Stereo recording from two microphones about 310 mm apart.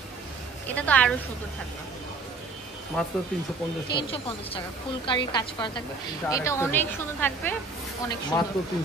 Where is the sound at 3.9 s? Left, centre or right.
Centre.